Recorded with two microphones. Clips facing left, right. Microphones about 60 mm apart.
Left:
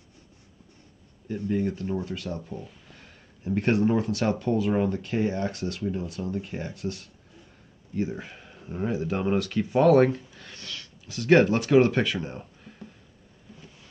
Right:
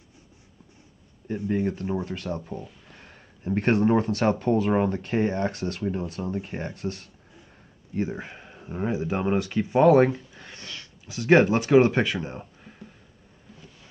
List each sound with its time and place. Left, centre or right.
1.5 s speech: right